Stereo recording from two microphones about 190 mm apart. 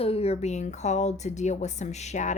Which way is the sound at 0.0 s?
30° left (ahead or behind).